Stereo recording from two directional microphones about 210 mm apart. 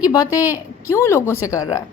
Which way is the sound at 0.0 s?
20° left (ahead or behind).